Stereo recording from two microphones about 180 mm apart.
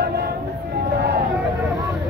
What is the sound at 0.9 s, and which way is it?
Vehicle, 65° right (ahead or behind).